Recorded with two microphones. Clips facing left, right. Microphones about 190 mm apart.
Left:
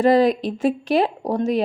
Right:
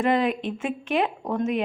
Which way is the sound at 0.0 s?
35° left (ahead or behind).